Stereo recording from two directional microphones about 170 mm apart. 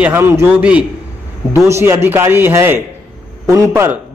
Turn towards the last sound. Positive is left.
turn(degrees=-15)  # may be behind; listen again after turning